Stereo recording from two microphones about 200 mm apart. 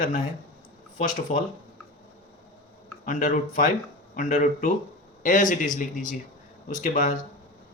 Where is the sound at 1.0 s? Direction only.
40° left (ahead or behind).